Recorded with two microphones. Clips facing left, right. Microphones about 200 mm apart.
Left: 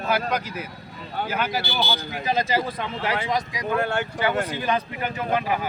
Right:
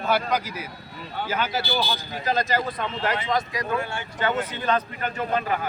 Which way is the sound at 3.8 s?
60° left (ahead or behind).